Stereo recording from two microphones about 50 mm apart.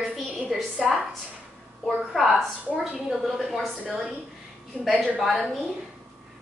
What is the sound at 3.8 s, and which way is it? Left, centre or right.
Speech, centre.